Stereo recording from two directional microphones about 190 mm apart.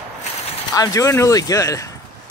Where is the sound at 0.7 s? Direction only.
20° left (ahead or behind).